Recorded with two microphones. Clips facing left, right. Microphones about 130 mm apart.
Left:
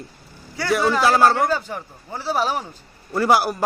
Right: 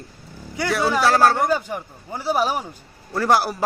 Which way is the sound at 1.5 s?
15° right (ahead or behind).